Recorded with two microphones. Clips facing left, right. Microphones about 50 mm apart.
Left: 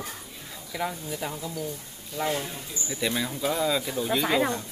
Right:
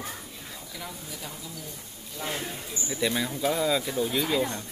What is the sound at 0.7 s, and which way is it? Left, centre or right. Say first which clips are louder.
A woman's voice: left 11 dB; left.